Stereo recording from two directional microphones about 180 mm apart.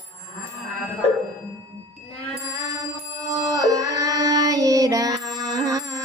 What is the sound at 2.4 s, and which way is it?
Music, 20° right (ahead or behind).